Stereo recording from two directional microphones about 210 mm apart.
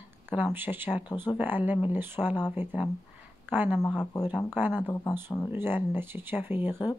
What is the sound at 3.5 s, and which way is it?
Speech, 10° right (ahead or behind).